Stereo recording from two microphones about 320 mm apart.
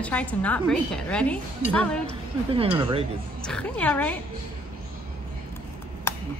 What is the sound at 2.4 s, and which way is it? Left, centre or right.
Speech, centre.